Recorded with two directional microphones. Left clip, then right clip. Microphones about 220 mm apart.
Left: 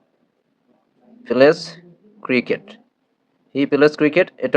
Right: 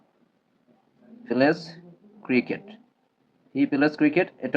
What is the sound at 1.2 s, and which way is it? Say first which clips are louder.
Speech: left 9 dB; 50° left (ahead or behind).